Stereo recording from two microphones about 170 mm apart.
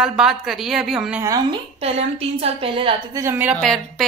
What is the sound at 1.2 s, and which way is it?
Speech, 20° right (ahead or behind).